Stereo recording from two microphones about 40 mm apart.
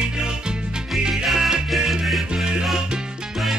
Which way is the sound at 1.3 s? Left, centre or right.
Centre.